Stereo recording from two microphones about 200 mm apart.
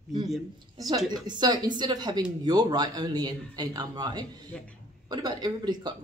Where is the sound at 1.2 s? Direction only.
20° right (ahead or behind).